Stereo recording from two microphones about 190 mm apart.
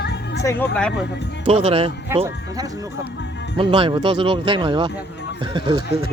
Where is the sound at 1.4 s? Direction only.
30° right (ahead or behind).